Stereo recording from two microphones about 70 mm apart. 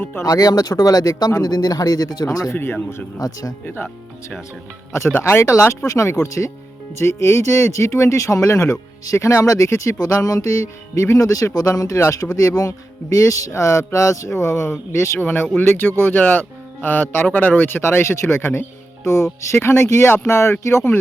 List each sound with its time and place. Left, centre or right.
0.0 s speech: left
0.3 s speech: left
2.5 s speech: left
3.2 s speech: left
4.9 s speech: left
10.0 s speech: left
15.2 s speech: left
19.0 s speech: left